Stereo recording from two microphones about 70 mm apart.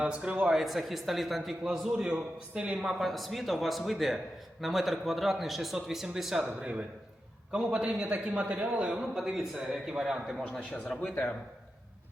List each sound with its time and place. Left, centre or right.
0.0 s speech: centre
0.5 s a man's voice: centre